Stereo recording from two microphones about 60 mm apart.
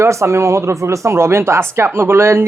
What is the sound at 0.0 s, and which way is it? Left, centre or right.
Speech, right.